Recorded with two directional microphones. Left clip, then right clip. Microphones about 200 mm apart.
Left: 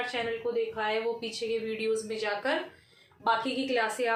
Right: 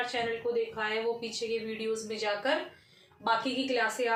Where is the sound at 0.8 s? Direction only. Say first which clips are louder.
Left 1 dB; 30° left (ahead or behind).